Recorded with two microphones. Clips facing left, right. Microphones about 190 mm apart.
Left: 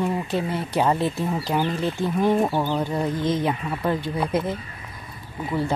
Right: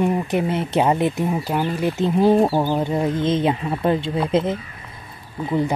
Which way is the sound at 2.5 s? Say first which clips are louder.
Right 4 dB; 20° right (ahead or behind).